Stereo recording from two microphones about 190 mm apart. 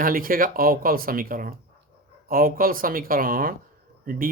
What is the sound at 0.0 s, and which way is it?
Speech, 50° right (ahead or behind).